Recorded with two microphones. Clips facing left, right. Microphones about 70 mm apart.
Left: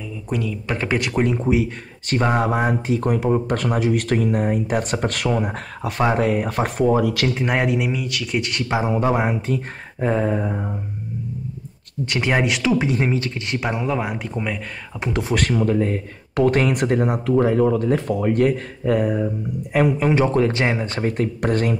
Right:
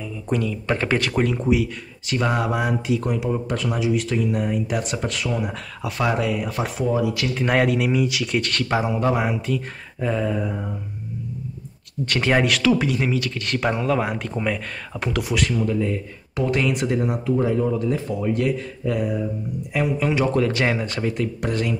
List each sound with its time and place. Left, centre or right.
0.3 s speech: centre
2.0 s speech: left
5.3 s speech: left
7.3 s speech: centre
7.9 s speech: centre
8.3 s speech: centre
8.8 s speech: left
12.1 s speech: centre; by 13.4 s left
13.5 s speech: centre
15.0 s speech: left
15.3 s speech: left